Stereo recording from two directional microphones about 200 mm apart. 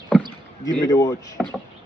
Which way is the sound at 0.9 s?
20° left (ahead or behind).